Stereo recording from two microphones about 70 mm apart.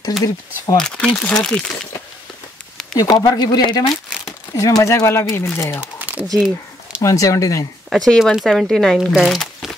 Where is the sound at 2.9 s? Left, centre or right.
Left.